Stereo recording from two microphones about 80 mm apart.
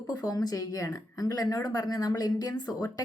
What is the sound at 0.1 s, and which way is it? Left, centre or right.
Speech, left.